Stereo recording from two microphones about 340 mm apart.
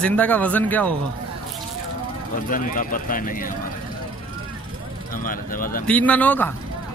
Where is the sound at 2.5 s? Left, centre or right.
Left.